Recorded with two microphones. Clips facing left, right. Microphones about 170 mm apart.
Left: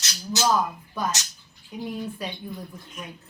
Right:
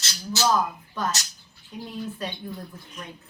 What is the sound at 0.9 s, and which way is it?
A woman's voice, 15° left (ahead or behind).